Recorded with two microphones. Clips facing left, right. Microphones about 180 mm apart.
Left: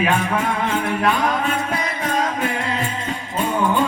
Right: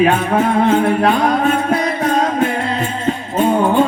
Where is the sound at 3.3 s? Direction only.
45° right (ahead or behind).